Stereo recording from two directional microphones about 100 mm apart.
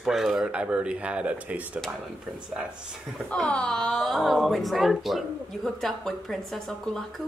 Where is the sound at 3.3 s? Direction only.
10° left (ahead or behind).